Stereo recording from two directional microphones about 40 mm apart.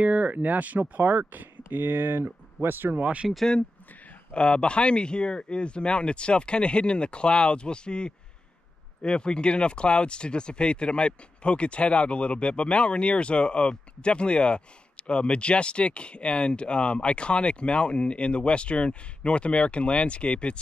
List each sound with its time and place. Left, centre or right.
0.0 s speech: right
1.8 s speech: right
4.3 s speech: left